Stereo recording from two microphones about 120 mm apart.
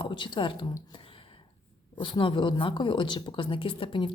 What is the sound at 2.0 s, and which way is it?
Speech, 45° left (ahead or behind).